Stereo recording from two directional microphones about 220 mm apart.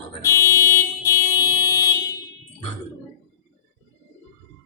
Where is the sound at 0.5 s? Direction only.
15° left (ahead or behind).